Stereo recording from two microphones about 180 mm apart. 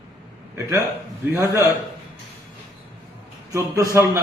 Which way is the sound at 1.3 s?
15° right (ahead or behind).